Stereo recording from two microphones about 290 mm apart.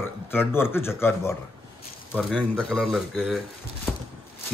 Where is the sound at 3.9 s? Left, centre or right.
Centre.